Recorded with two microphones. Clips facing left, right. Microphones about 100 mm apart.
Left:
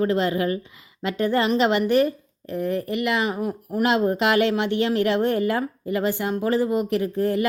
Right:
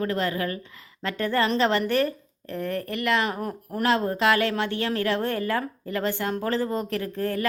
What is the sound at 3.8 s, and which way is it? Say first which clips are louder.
Speech: left 2 dB; 15° left (ahead or behind).